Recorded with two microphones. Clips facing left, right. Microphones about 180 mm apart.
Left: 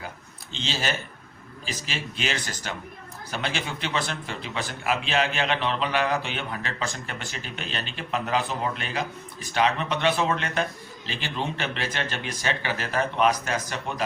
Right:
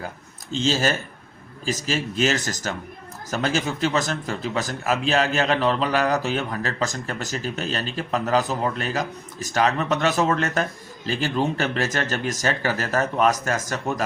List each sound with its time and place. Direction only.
0.5 s a man's voice: 45° right (ahead or behind)